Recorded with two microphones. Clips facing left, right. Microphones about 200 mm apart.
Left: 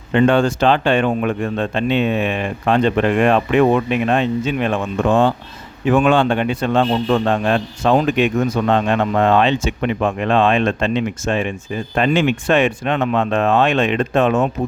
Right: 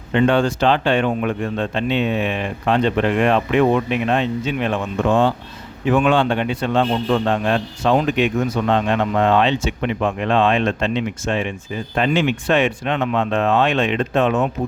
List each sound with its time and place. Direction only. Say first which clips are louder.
0.1 s a man's voice: left 2 dB; 50° left (ahead or behind)